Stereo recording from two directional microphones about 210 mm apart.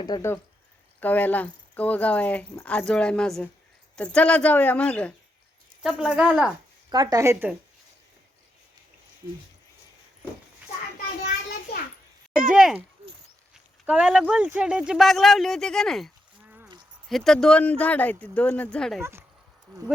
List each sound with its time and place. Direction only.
0.0 s speech: 15° left (ahead or behind); by 6.5 s 5° right (ahead or behind)
6.9 s speech: 20° right (ahead or behind)
12.5 s speech: 5° right (ahead or behind)
13.8 s speech: 5° right (ahead or behind)